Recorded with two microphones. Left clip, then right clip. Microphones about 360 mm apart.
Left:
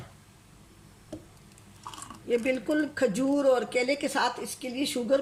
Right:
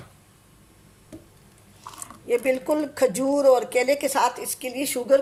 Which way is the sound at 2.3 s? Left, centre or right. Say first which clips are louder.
Right 5 dB; centre.